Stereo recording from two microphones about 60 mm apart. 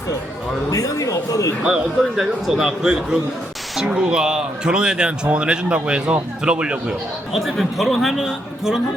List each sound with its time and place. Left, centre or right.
0.7 s a man's voice: left
1.6 s speech: centre
7.3 s a man's voice: centre